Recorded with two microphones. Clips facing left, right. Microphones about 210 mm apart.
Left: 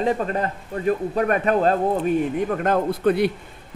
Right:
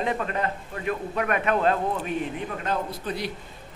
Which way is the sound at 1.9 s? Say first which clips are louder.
Left 8 dB; 50° left (ahead or behind).